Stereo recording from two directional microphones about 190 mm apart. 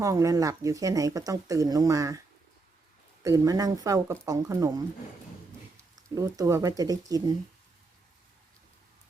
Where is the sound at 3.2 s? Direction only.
15° right (ahead or behind).